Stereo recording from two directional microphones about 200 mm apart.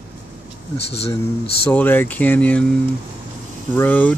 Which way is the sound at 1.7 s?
10° left (ahead or behind).